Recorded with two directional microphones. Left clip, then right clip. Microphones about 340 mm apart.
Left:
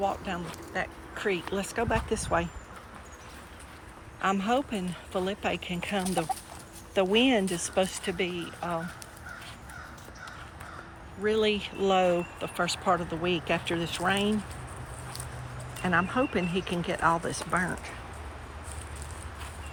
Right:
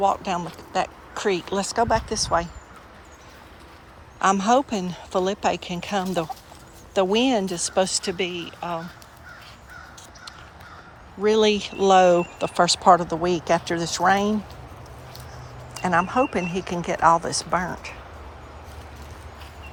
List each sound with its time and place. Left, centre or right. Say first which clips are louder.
0.0 s speech: right 9 dB; centre
4.2 s speech: right 8 dB; centre
11.2 s speech: right 7 dB; centre
13.3 s speech: right 6 dB; right
14.0 s speech: right 10 dB; centre
15.8 s speech: right 6 dB; centre
16.5 s speech: right 4 dB; right
16.9 s speech: right 9 dB; centre